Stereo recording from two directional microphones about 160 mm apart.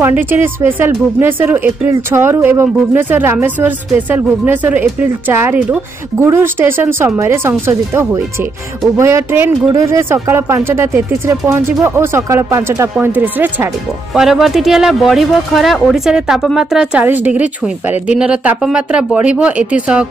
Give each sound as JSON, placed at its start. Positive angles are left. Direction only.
{"t": 0.0, "sound": "speech", "side_deg": -10}